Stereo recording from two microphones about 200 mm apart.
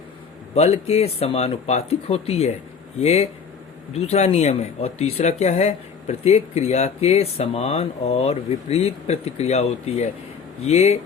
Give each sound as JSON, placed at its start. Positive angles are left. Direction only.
{"t": 0.5, "sound": "speech", "side_deg": 30}